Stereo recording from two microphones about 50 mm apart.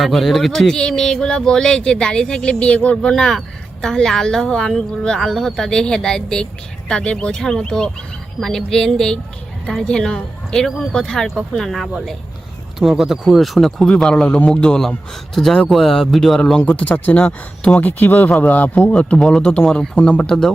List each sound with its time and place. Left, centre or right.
0.0 s speech: centre
0.7 s speech: centre
13.8 s speech: centre
16.6 s speech: left
18.9 s speech: left
20.2 s speech: centre